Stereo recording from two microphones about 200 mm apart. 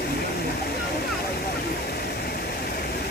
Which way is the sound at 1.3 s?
50° left (ahead or behind).